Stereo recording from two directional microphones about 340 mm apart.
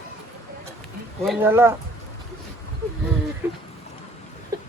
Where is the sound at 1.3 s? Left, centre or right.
Centre.